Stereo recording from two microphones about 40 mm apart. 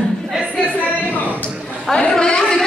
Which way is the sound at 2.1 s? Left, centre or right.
Centre.